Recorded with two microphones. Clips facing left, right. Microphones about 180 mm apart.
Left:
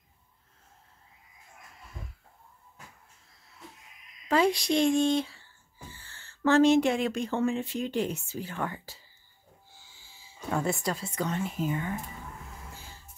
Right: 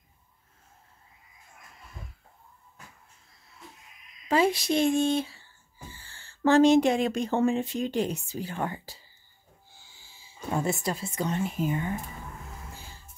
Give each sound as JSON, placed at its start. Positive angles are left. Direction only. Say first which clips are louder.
{"t": 4.3, "sound": "speech", "louder": "right 1 dB", "side_deg": -5}
{"t": 7.2, "sound": "speech", "louder": "right 3 dB", "side_deg": -30}
{"t": 7.6, "sound": "speech", "louder": "right 2 dB", "side_deg": -20}
{"t": 7.9, "sound": "speech", "louder": "right 2 dB", "side_deg": -35}
{"t": 10.5, "sound": "speech", "louder": "right 1 dB", "side_deg": -25}